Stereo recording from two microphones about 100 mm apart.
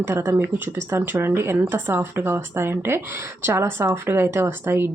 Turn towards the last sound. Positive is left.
turn(degrees=-25)  # may be behind; listen again after turning